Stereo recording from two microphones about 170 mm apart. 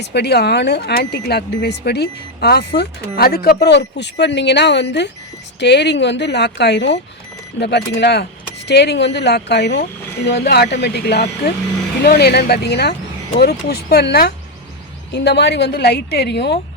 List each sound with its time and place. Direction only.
0.0 s a woman's voice: 80° left
7.6 s speech: 75° left (ahead or behind)
10.2 s speech: 70° left (ahead or behind)
15.1 s speech: 80° left